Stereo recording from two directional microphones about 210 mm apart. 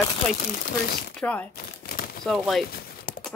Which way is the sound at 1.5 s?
45° left (ahead or behind).